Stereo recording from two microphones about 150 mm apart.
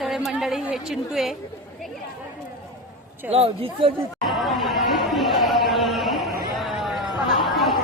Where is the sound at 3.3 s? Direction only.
40° right (ahead or behind).